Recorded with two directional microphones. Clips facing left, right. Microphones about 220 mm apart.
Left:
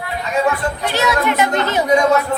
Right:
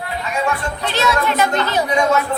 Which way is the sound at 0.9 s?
15° left (ahead or behind).